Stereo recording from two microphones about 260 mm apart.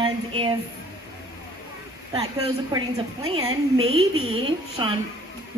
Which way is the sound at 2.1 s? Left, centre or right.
Centre.